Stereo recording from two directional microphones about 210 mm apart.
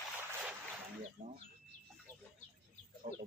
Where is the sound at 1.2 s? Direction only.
35° right (ahead or behind).